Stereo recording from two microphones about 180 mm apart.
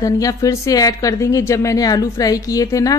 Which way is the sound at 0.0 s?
20° left (ahead or behind).